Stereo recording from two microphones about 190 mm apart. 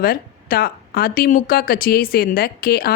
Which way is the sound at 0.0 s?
50° left (ahead or behind).